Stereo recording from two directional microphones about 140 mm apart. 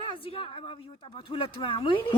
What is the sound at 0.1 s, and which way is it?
A woman's voice, 45° left (ahead or behind).